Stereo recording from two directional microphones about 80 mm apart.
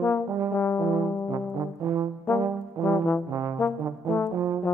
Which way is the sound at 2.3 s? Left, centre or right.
Left.